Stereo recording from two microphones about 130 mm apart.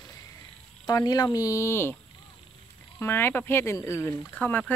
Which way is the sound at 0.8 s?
30° left (ahead or behind).